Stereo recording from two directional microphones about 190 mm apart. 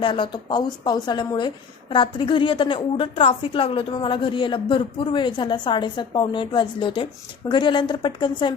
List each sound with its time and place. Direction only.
0.0 s a woman's voice: 25° left (ahead or behind)